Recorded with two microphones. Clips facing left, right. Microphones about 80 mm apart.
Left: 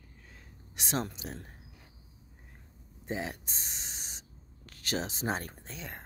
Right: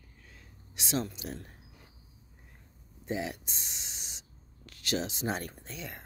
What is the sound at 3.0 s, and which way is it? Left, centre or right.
Speech, left.